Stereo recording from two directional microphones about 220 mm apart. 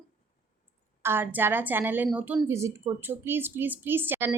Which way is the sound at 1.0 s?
10° right (ahead or behind).